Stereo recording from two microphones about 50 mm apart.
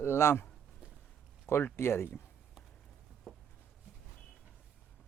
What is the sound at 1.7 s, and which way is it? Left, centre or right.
Speech, left.